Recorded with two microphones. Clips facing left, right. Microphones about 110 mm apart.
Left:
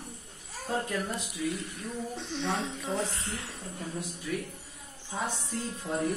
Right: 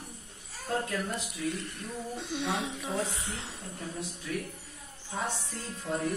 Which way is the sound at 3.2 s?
20° right (ahead or behind).